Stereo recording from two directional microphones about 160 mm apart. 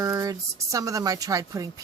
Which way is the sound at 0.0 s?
20° right (ahead or behind).